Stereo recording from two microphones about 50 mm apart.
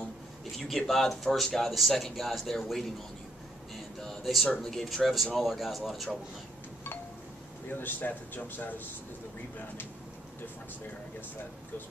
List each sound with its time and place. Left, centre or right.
0.6 s speech: centre
4.0 s a sound: centre
4.6 s speech: centre
7.8 s speech: left